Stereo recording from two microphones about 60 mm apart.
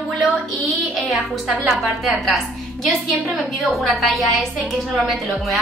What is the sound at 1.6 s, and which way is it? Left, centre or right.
Speech, centre.